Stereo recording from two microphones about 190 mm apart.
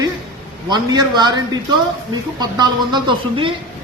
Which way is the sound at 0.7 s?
20° right (ahead or behind).